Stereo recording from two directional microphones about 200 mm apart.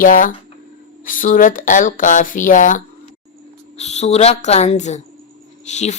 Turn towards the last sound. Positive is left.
turn(degrees=35)  # may be behind; listen again after turning